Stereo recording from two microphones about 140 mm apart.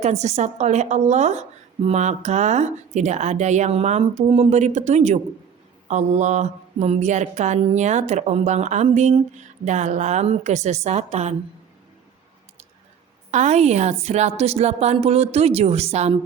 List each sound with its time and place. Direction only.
0.0 s speech: 55° right (ahead or behind)
13.3 s a woman's voice: 55° right (ahead or behind)